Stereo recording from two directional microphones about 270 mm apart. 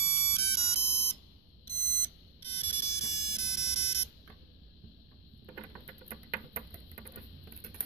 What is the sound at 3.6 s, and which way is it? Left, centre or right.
Pulse, left.